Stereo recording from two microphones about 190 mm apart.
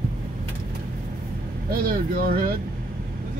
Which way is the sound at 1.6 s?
50° right (ahead or behind).